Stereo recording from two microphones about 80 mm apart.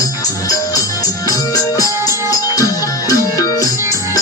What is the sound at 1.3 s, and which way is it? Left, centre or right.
Music, left.